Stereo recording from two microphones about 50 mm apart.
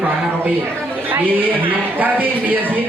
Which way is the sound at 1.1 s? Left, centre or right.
Right.